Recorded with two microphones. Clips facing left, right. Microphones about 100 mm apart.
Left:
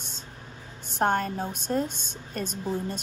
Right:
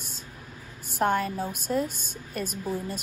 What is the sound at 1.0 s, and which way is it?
Speech, 55° left (ahead or behind).